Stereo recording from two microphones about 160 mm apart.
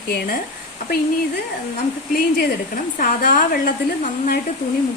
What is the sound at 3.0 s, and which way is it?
A woman's voice, 65° left (ahead or behind).